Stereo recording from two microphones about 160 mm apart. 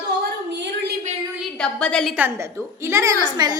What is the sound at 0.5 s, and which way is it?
Speech, 90° right.